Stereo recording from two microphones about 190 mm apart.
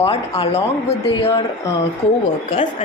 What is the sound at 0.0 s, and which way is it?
Speech, 30° left (ahead or behind).